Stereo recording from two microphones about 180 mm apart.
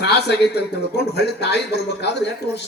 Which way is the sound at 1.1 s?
65° left (ahead or behind).